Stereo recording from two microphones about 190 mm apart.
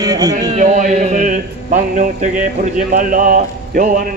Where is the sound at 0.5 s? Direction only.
40° right (ahead or behind).